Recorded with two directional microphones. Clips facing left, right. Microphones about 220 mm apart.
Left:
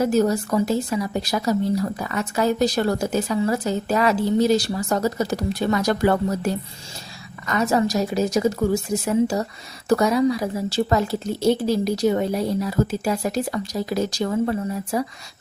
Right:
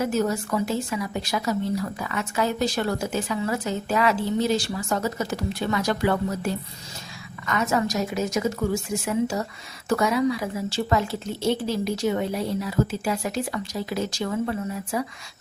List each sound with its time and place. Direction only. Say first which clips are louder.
0.0 s a woman's voice: left 5 dB; 35° left (ahead or behind)